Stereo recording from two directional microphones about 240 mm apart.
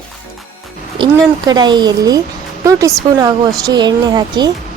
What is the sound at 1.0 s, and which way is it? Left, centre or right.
A woman's voice, centre.